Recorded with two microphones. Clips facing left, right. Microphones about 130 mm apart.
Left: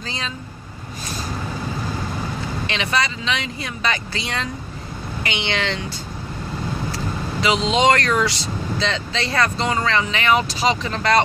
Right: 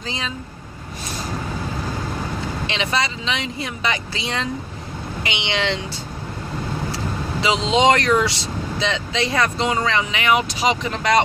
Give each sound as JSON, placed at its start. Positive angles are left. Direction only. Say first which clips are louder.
{"t": 2.6, "sound": "speech", "louder": "left 1 dB", "side_deg": -20}
{"t": 7.3, "sound": "speech", "louder": "even", "side_deg": -25}